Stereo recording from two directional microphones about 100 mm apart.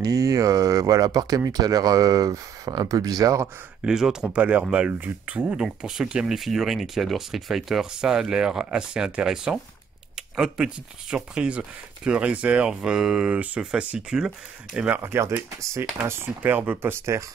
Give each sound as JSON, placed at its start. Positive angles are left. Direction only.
{"t": 0.0, "sound": "speech", "side_deg": -35}
{"t": 3.8, "sound": "speech", "side_deg": -5}
{"t": 14.9, "sound": "speech", "side_deg": -25}